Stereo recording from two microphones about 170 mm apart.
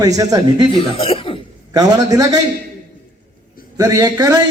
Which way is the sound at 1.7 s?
20° right (ahead or behind).